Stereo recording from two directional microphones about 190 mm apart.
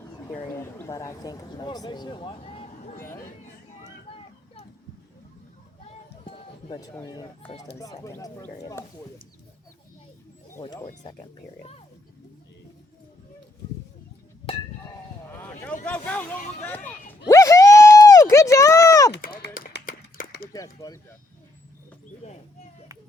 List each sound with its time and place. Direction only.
0.5 s speech: 15° left (ahead or behind); by 2.9 s 30° left (ahead or behind)
4.1 s a sound: 30° left (ahead or behind)
5.9 s music: 30° left (ahead or behind)
6.7 s speech: 20° left (ahead or behind)
15.3 s a sound: 10° left (ahead or behind)
15.9 s speech: 10° left (ahead or behind)
16.6 s a sound: 10° left (ahead or behind)
19.1 s run: 55° left (ahead or behind)
20.5 s speech: 15° left (ahead or behind)
22.2 s speech: 35° left (ahead or behind)